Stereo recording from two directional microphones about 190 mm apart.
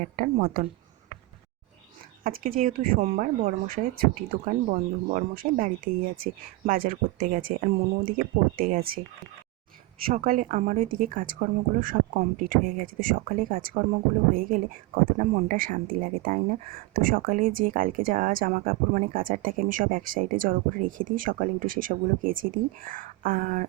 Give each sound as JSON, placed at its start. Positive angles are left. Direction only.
{"t": 0.0, "sound": "speech", "side_deg": -40}
{"t": 2.2, "sound": "speech", "side_deg": -50}
{"t": 10.1, "sound": "speech", "side_deg": -45}